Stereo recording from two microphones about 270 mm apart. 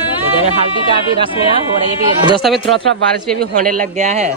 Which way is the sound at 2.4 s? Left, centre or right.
Centre.